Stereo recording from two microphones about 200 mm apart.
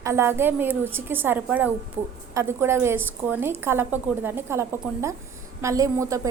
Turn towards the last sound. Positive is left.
turn(degrees=-15)  # may be behind; listen again after turning